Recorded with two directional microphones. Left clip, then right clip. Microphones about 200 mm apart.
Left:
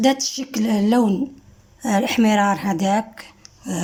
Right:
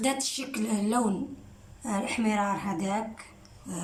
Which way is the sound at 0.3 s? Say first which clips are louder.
Left 9 dB; 35° left (ahead or behind).